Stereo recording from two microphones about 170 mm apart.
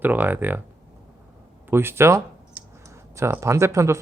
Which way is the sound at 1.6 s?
15° right (ahead or behind).